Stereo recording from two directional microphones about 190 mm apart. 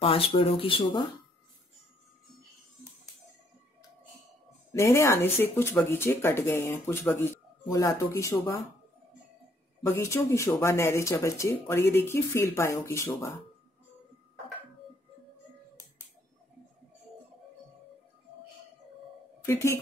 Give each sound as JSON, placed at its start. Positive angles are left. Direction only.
{"t": 0.0, "sound": "speech", "side_deg": 30}
{"t": 4.7, "sound": "speech", "side_deg": 15}
{"t": 9.8, "sound": "speech", "side_deg": 15}
{"t": 19.4, "sound": "a woman's voice", "side_deg": 15}